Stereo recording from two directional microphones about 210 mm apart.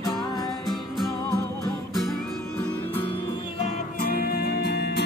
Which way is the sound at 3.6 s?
45° left (ahead or behind).